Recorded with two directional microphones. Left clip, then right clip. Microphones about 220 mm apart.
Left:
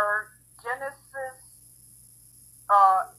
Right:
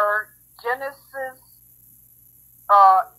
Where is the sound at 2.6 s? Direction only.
35° right (ahead or behind).